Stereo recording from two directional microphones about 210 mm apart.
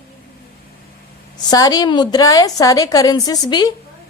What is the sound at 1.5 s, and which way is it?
A woman's voice, 20° left (ahead or behind).